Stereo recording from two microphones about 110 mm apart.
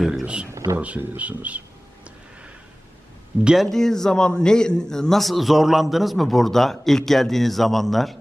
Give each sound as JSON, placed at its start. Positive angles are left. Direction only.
{"t": 0.0, "sound": "speech", "side_deg": -5}
{"t": 0.5, "sound": "speech", "side_deg": -30}
{"t": 0.8, "sound": "speech", "side_deg": -15}
{"t": 3.4, "sound": "a man's voice", "side_deg": 0}